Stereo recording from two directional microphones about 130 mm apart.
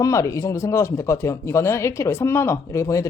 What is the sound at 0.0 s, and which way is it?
Speech, 25° left (ahead or behind).